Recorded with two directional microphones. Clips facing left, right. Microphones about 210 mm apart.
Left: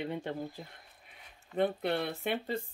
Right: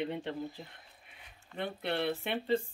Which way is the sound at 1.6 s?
45° left (ahead or behind).